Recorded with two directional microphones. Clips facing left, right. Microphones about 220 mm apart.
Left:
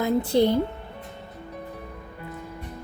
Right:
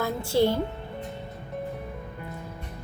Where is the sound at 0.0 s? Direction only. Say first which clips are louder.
Left 3 dB; 20° left (ahead or behind).